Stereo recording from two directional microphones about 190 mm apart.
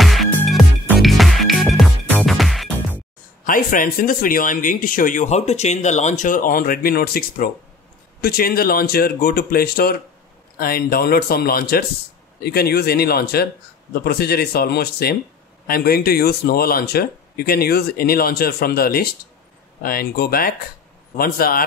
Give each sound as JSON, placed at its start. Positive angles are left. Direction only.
{"t": 0.0, "sound": "music", "side_deg": 0}
{"t": 3.4, "sound": "speech", "side_deg": 45}